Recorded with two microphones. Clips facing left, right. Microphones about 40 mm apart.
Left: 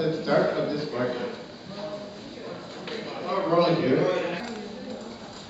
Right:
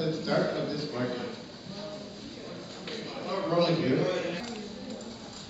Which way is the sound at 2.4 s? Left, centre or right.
Centre.